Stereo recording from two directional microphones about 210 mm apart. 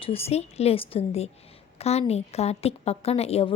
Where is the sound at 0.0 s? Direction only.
30° left (ahead or behind).